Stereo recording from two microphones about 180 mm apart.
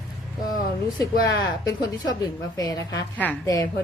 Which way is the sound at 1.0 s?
20° left (ahead or behind).